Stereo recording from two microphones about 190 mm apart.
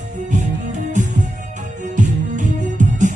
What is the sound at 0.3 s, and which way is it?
Music, 40° right (ahead or behind).